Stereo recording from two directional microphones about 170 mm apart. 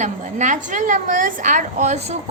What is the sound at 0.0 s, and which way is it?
A woman's voice, 45° right (ahead or behind).